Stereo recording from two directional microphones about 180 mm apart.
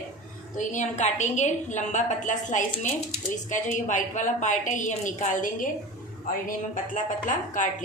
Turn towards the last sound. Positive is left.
turn(degrees=45)  # may be behind; listen again after turning